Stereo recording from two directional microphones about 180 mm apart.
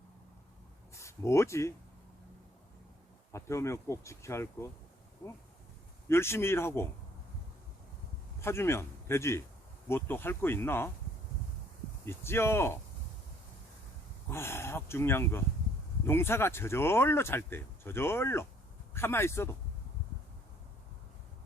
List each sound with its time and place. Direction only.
0.9 s speech: 15° left (ahead or behind)
3.3 s speech: 15° left (ahead or behind)
6.1 s speech: 15° left (ahead or behind)
8.4 s a man's voice: 15° left (ahead or behind)
12.0 s speech: 15° left (ahead or behind)
14.3 s speech: 15° left (ahead or behind)